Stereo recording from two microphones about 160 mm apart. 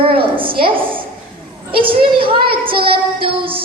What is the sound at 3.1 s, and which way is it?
Speech, 35° right (ahead or behind).